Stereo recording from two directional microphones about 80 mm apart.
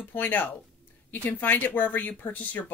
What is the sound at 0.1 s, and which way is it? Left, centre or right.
Speech, left.